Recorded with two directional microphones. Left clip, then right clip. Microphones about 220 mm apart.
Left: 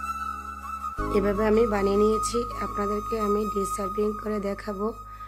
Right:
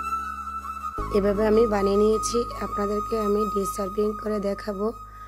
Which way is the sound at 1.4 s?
10° right (ahead or behind).